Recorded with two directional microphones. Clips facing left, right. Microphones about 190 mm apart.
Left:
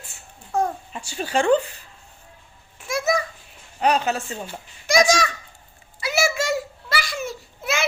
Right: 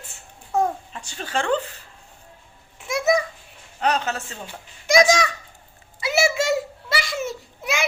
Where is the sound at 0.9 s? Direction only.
10° left (ahead or behind).